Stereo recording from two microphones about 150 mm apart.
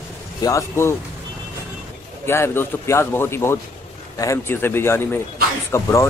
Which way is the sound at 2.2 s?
15° left (ahead or behind).